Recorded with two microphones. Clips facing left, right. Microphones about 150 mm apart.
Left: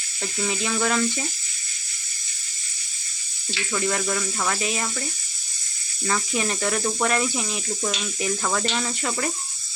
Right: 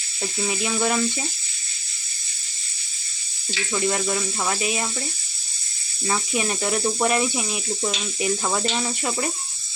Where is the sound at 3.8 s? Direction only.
30° right (ahead or behind).